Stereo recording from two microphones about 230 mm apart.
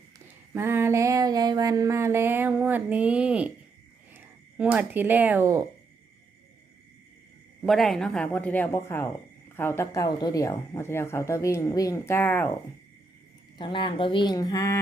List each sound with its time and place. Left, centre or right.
0.5 s a sound: centre
4.1 s speech: centre
7.6 s speech: centre
13.6 s speech: left